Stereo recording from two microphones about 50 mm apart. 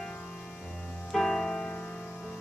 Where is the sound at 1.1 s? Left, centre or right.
Centre.